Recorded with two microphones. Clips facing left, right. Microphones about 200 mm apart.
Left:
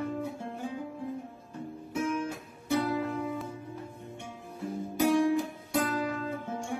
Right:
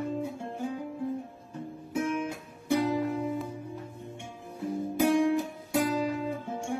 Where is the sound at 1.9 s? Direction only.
15° right (ahead or behind).